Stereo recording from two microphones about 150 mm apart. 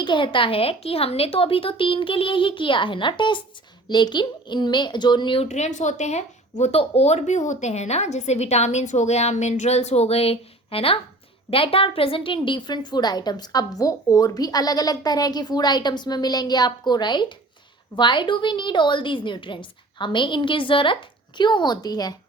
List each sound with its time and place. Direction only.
0.0 s a woman's voice: 30° left (ahead or behind)
5.5 s a woman's voice: 50° left (ahead or behind); by 22.1 s 25° left (ahead or behind)